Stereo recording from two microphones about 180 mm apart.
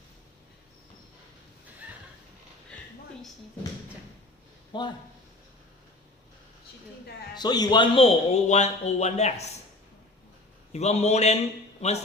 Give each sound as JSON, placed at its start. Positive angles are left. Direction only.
{"t": 4.7, "sound": "speech", "side_deg": 25}
{"t": 7.3, "sound": "a man's voice", "side_deg": 20}
{"t": 10.7, "sound": "a man's voice", "side_deg": 35}